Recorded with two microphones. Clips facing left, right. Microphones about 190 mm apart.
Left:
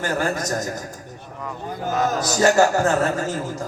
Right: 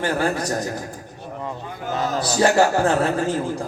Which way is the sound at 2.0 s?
45° left (ahead or behind).